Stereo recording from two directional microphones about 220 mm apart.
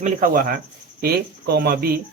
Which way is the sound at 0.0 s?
40° right (ahead or behind).